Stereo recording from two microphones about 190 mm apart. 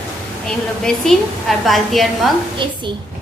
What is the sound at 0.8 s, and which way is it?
Speech, centre (ahead or behind).